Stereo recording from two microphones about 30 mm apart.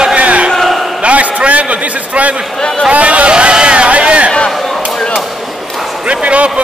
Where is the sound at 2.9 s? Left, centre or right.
Right.